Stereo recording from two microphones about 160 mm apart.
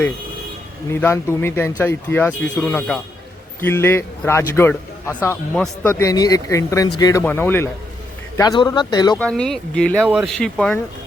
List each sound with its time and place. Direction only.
0.9 s speech: 15° left (ahead or behind)
8.4 s speech: 25° left (ahead or behind)
9.1 s speech: 5° left (ahead or behind)